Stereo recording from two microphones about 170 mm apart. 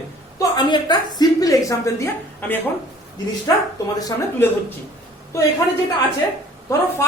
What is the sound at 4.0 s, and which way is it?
Speech, 15° left (ahead or behind).